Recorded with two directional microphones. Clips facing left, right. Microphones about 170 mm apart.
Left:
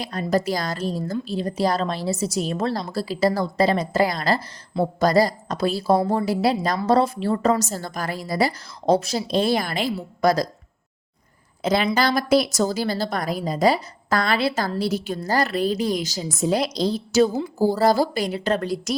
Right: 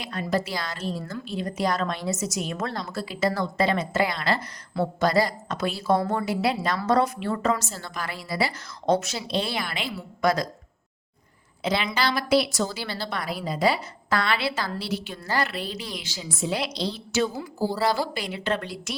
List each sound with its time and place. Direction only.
0.0 s a woman's voice: 40° left (ahead or behind)
11.6 s a woman's voice: 45° left (ahead or behind)